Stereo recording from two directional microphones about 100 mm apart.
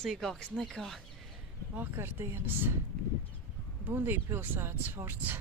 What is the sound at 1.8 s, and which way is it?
Speech, 25° right (ahead or behind).